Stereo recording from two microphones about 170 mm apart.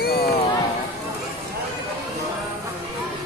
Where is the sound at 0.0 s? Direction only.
65° left (ahead or behind).